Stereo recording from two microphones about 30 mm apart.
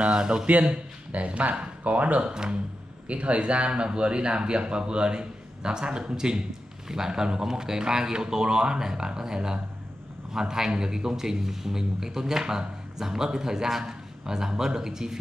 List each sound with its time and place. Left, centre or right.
0.1 s speech: right
0.5 s speech: right
1.8 s speech: right
2.2 s speech: right
3.1 s a man's voice: right; by 15.1 s centre